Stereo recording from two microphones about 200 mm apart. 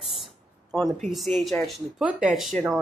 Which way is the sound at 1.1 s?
Centre (ahead or behind).